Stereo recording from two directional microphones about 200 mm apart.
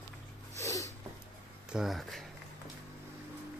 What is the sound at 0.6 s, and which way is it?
Snort, 15° left (ahead or behind).